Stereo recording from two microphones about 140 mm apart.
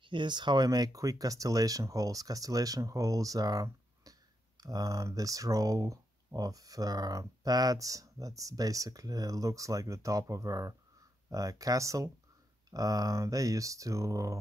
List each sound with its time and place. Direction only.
0.0 s speech: 35° right (ahead or behind)